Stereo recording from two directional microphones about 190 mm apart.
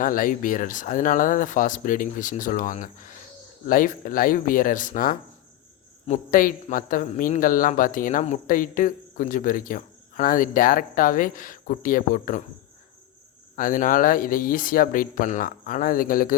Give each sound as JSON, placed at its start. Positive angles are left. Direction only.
{"t": 0.0, "sound": "a man's voice", "side_deg": 45}
{"t": 13.6, "sound": "a man's voice", "side_deg": 45}